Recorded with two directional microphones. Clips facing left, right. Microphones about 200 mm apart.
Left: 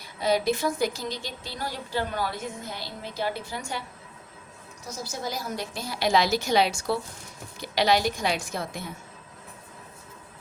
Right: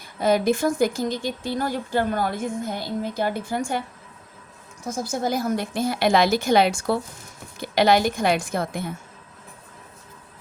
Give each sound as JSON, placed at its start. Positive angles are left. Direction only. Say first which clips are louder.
{"t": 0.0, "sound": "speech", "louder": "right 4 dB", "side_deg": -50}
{"t": 4.9, "sound": "speech", "louder": "right 9 dB", "side_deg": -50}